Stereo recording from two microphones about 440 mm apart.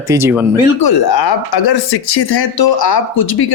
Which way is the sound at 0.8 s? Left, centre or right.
Left.